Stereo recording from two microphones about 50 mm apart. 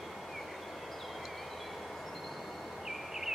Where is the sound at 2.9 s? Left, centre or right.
Centre.